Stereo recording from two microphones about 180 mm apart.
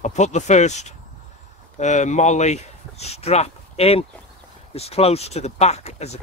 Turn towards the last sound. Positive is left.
turn(degrees=35)  # may be behind; listen again after turning